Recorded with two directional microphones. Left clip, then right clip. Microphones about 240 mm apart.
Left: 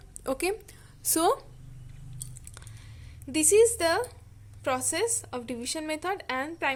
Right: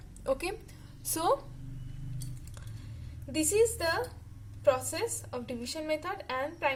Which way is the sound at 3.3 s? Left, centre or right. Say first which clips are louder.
Left 6 dB; left.